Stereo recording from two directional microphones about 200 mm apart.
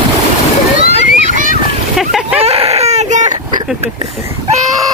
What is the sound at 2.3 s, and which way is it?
Baby cry, 30° right (ahead or behind).